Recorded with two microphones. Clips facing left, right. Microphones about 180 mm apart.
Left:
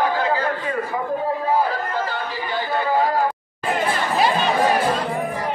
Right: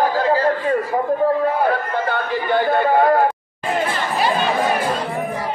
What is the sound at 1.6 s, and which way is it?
Speech, 60° right (ahead or behind).